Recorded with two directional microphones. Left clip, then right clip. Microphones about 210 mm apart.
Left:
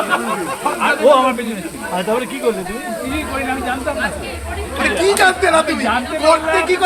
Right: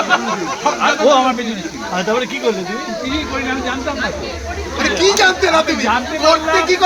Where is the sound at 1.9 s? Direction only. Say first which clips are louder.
Right 1 dB; 30° right (ahead or behind).